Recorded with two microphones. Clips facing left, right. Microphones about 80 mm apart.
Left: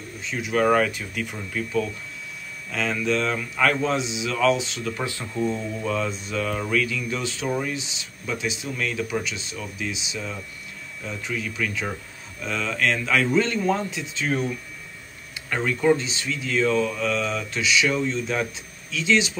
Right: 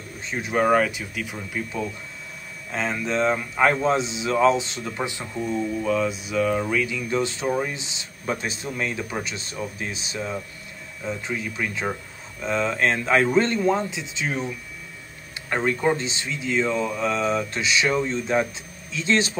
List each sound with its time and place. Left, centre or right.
0.2 s speech: right
0.7 s speech: centre
2.7 s speech: right
4.9 s speech: right
5.2 s speech: centre
7.1 s speech: right
7.4 s speech: centre
7.7 s speech: right
8.3 s speech: right
8.6 s speech: right
13.7 s speech: right
15.5 s speech: right